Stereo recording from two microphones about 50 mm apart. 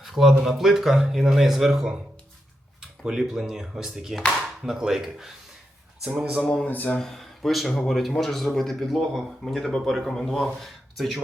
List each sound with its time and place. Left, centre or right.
0.0 s a man's voice: centre
6.7 s speech: left
7.0 s a man's voice: centre